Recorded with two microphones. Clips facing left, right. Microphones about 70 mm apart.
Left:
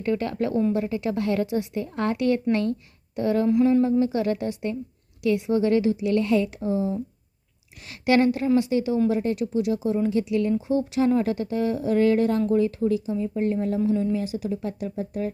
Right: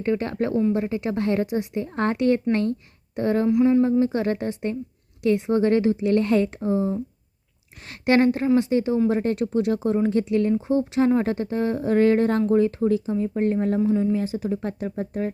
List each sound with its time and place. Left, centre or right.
0.0 s a woman's voice: right
1.9 s speech: right
3.4 s speech: centre
4.0 s speech: right
13.9 s a woman's voice: right
14.2 s speech: right